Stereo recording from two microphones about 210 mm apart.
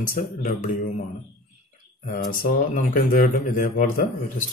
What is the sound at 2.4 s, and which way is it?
Speech, 40° left (ahead or behind).